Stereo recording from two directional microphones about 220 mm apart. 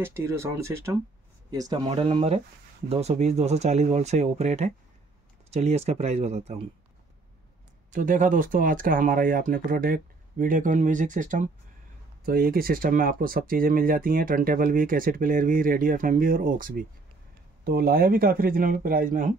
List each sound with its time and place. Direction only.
0.0 s speech: 10° right (ahead or behind); by 6.6 s 30° right (ahead or behind)
7.9 s speech: 35° right (ahead or behind)